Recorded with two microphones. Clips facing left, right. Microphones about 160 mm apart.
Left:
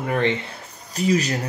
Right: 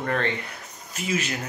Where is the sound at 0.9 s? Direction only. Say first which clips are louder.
Left 8 dB; 35° left (ahead or behind).